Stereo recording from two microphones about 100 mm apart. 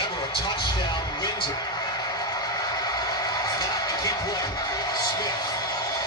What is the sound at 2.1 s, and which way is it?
Music, 40° left (ahead or behind).